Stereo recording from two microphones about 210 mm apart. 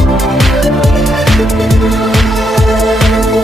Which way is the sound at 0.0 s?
Centre (ahead or behind).